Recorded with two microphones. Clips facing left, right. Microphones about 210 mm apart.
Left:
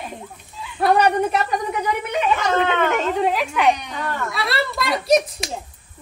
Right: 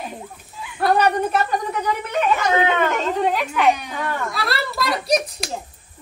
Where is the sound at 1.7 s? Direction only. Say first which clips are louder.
Left 1 dB; 5° left (ahead or behind).